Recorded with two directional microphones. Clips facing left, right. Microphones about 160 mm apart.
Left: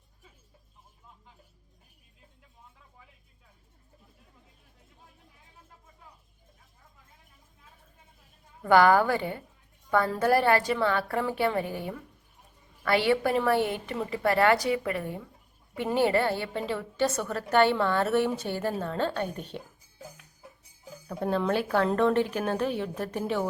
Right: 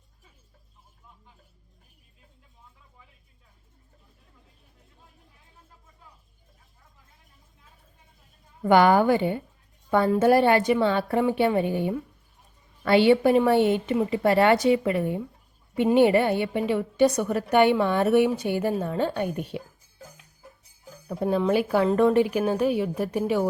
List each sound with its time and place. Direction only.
8.6 s a woman's voice: 20° right (ahead or behind)
21.1 s a woman's voice: 10° right (ahead or behind)